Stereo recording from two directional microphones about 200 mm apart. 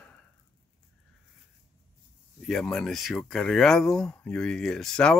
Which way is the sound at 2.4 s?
5° left (ahead or behind).